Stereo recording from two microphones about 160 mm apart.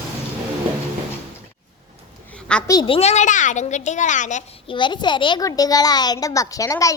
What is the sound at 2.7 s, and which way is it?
A child's voice, 30° left (ahead or behind).